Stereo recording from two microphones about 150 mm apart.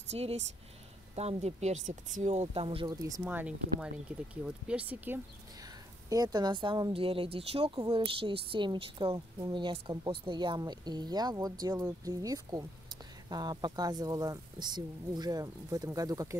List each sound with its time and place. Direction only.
0.1 s speech: 45° right (ahead or behind)
2.9 s speech: 25° right (ahead or behind)
3.3 s speech: 10° right (ahead or behind)
6.0 s a woman's voice: 25° right (ahead or behind)